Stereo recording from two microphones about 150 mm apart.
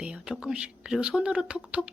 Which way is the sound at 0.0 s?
5° right (ahead or behind).